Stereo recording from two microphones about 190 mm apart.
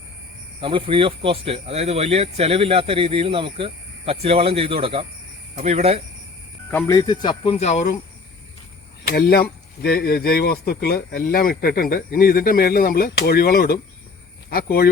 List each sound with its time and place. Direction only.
0.6 s speech: 25° right (ahead or behind)
6.7 s speech: 15° left (ahead or behind); by 7.9 s 35° left (ahead or behind)
9.0 s speech: 55° left (ahead or behind)